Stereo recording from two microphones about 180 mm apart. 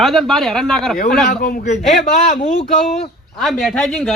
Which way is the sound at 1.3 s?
50° left (ahead or behind).